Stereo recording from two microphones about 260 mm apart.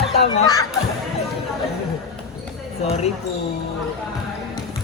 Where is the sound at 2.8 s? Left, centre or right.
Left.